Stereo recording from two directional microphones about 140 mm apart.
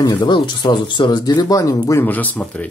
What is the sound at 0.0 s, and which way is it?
Speech, 35° left (ahead or behind).